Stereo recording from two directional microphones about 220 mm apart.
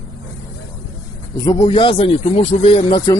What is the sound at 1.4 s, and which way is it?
Speech, 20° left (ahead or behind).